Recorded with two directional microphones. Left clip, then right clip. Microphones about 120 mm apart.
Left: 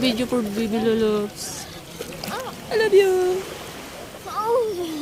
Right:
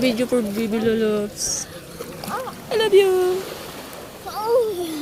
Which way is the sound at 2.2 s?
15° right (ahead or behind).